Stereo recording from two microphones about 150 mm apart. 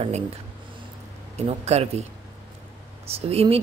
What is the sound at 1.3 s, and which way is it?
Speech, 45° right (ahead or behind).